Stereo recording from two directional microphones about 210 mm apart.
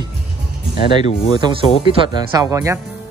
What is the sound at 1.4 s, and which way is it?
Speech, 20° right (ahead or behind).